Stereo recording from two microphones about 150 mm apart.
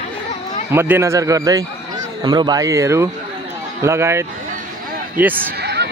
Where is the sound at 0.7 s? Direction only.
15° right (ahead or behind).